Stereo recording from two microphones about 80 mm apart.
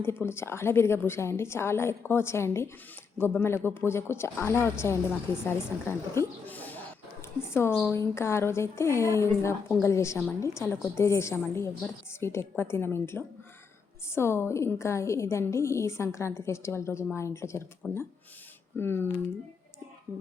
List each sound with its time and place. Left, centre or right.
0.0 s speech: left
7.2 s speech: left
17.8 s speech: left